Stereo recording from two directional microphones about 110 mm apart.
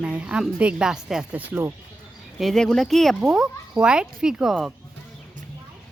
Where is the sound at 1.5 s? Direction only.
20° right (ahead or behind).